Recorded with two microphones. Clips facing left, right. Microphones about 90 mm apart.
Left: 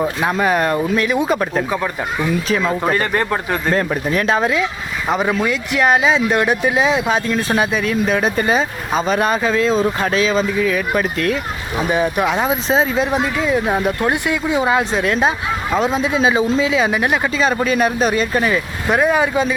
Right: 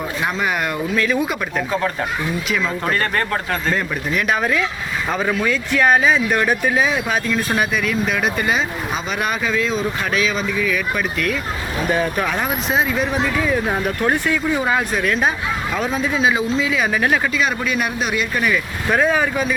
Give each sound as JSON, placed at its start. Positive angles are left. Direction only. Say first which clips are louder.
{"t": 0.2, "sound": "speech", "louder": "left 3 dB", "side_deg": 40}
{"t": 0.9, "sound": "speech", "louder": "left 2 dB", "side_deg": 20}
{"t": 1.3, "sound": "speech", "louder": "left 4 dB", "side_deg": 35}
{"t": 2.8, "sound": "speech", "louder": "left 3 dB", "side_deg": 15}
{"t": 3.8, "sound": "speech", "louder": "left 4 dB", "side_deg": 40}
{"t": 4.3, "sound": "speech", "louder": "left 1 dB", "side_deg": 25}
{"t": 11.9, "sound": "speech", "louder": "left 3 dB", "side_deg": 15}
{"t": 13.1, "sound": "speech", "louder": "left 2 dB", "side_deg": 15}
{"t": 16.9, "sound": "speech", "louder": "left 1 dB", "side_deg": 15}
{"t": 17.3, "sound": "speech", "louder": "left 4 dB", "side_deg": 35}
{"t": 18.9, "sound": "speech", "louder": "left 2 dB", "side_deg": 15}